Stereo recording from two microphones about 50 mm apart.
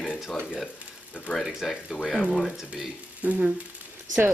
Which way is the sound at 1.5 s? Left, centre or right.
Centre.